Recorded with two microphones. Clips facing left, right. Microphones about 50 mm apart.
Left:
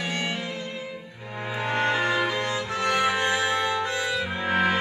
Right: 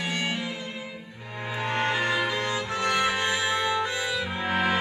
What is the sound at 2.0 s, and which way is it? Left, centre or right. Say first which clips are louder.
Music: left 2 dB; left.